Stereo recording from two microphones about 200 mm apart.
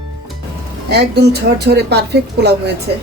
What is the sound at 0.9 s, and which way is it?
Speech, 55° right (ahead or behind).